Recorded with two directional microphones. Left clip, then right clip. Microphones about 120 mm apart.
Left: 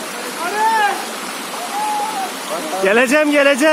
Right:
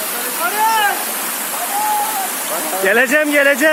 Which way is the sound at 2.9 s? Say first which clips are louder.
Even; 20° left (ahead or behind).